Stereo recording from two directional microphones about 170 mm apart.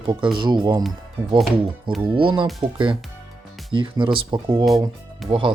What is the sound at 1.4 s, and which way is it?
Speech, centre (ahead or behind).